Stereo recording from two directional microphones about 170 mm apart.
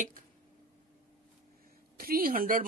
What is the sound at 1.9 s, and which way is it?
Speech, 60° right (ahead or behind).